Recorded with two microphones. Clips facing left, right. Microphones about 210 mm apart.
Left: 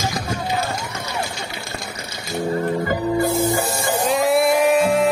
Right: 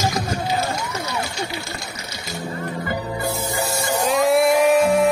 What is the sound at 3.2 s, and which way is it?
Music, 50° left (ahead or behind).